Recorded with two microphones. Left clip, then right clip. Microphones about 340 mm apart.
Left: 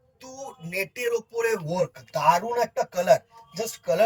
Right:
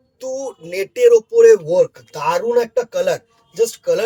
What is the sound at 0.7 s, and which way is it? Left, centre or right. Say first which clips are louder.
Speech: right 15 dB; right.